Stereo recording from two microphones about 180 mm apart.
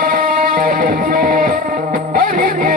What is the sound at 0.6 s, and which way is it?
Music, 55° right (ahead or behind).